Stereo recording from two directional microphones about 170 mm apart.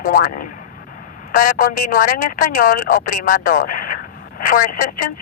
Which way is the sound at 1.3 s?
50° left (ahead or behind).